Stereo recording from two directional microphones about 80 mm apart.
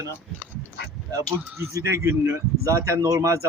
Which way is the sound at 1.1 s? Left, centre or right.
Right.